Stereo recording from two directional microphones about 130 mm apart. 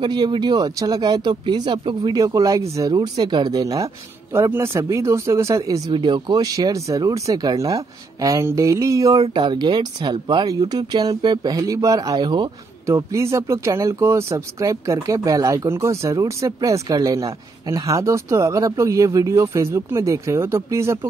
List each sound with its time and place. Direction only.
0.0 s speech: 35° right (ahead or behind)
5.9 s speech: 35° right (ahead or behind)
12.8 s speech: 20° right (ahead or behind)